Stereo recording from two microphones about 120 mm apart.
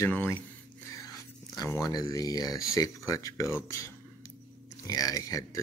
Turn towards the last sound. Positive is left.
turn(degrees=30)  # may be behind; listen again after turning